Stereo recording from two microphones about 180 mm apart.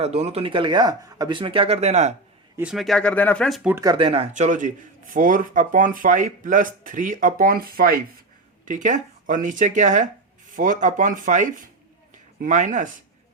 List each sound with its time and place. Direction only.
0.0 s speech: 35° right (ahead or behind)
2.6 s speech: 5° right (ahead or behind)
3.8 s speech: 25° right (ahead or behind); by 8.0 s 55° right (ahead or behind)
8.6 s speech: 45° right (ahead or behind)